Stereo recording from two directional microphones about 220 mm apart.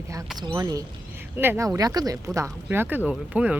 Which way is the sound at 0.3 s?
20° right (ahead or behind).